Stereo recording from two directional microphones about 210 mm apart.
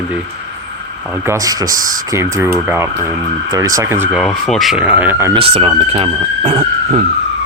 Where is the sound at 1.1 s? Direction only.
10° right (ahead or behind).